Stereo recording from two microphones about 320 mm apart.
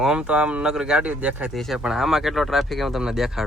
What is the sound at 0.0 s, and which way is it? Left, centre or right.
Speech, centre.